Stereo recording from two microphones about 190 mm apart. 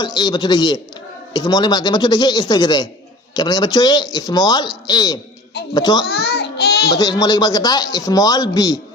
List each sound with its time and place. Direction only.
0.0 s a man's voice: 20° left (ahead or behind)
6.1 s a sound: 60° left (ahead or behind)
6.9 s a man's voice: 20° left (ahead or behind)